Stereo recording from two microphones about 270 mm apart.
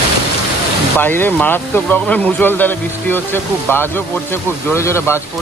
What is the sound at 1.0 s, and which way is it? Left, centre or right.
Speech, centre.